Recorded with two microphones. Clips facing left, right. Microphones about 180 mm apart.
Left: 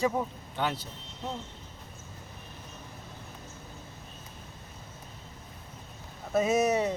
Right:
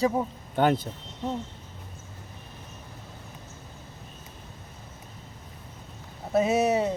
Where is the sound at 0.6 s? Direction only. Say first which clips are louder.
Right 9 dB; 50° right (ahead or behind).